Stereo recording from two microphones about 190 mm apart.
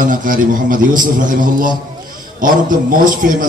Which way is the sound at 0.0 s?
45° right (ahead or behind).